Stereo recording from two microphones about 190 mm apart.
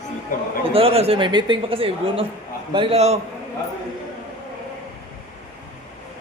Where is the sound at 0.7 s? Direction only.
30° right (ahead or behind).